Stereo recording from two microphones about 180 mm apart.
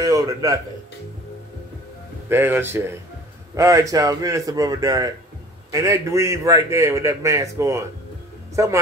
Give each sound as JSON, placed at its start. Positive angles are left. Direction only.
{"t": 0.0, "sound": "speech", "side_deg": -20}
{"t": 2.2, "sound": "a man's voice", "side_deg": -10}